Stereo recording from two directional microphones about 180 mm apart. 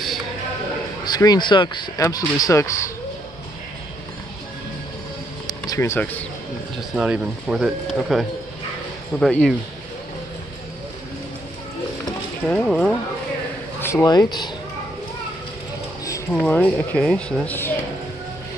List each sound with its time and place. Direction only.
1.0 s speech: 20° left (ahead or behind)
5.5 s speech: 20° left (ahead or behind)
7.0 s speech: 5° right (ahead or behind)
12.4 s speech: 5° left (ahead or behind); by 14.5 s 20° left (ahead or behind)
16.3 s speech: 5° left (ahead or behind)